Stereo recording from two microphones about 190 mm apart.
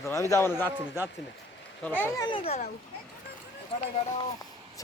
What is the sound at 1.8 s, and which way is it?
Speech, 10° left (ahead or behind).